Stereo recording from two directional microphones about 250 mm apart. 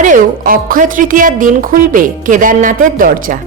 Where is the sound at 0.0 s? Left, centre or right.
Right.